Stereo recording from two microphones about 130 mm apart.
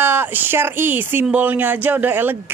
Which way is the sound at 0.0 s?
15° right (ahead or behind).